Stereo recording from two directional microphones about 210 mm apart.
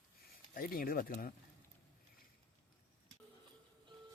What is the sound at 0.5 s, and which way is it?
Speech, 45° left (ahead or behind).